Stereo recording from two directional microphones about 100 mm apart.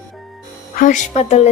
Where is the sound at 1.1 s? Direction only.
90° left.